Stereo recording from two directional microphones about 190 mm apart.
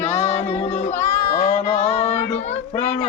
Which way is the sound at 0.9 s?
15° left (ahead or behind).